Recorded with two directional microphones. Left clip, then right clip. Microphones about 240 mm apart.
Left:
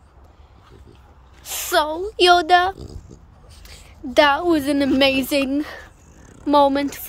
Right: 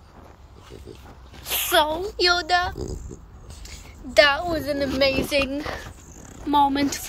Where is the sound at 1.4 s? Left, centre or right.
Left.